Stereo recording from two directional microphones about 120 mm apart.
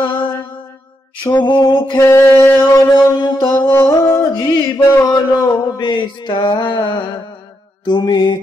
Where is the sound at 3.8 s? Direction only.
25° left (ahead or behind).